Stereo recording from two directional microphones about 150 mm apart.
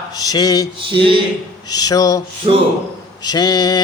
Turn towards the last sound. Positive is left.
turn(degrees=25)  # may be behind; listen again after turning